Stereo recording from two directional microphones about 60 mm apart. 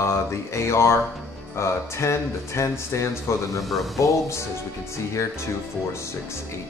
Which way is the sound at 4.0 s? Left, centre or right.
Left.